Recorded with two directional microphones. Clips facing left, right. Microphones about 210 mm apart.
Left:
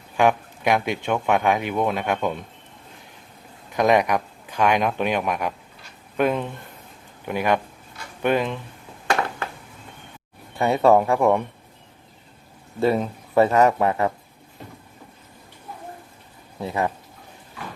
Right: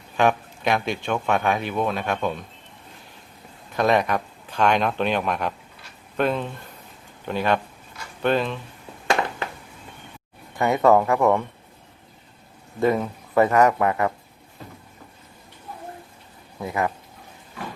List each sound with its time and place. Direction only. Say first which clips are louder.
0.2 s speech: left 1 dB; 15° left (ahead or behind)
3.8 s speech: left 2 dB; 15° left (ahead or behind)
10.8 s speech: left 1 dB; 15° left (ahead or behind)
12.9 s speech: left 1 dB; 25° left (ahead or behind)
16.6 s speech: left 1 dB; 25° left (ahead or behind)